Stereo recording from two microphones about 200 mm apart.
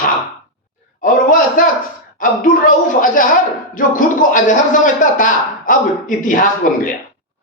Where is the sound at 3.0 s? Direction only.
45° left (ahead or behind).